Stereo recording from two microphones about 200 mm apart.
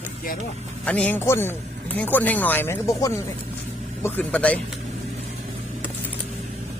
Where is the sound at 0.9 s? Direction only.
5° left (ahead or behind).